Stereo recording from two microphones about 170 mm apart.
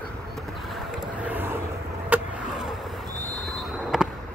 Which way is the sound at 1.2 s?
10° right (ahead or behind).